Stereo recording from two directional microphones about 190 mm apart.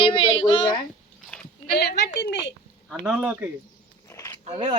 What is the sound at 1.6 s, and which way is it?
Speech, 55° left (ahead or behind).